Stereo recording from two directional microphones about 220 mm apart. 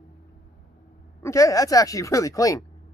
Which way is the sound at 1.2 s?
15° left (ahead or behind).